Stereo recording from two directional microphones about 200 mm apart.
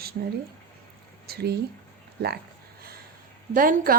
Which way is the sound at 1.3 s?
50° right (ahead or behind).